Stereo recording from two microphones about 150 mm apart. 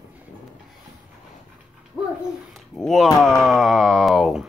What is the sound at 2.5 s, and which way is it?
Speech, centre (ahead or behind).